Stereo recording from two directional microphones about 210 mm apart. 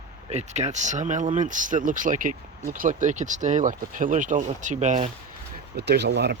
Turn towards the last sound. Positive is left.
turn(degrees=-50)  # may be behind; listen again after turning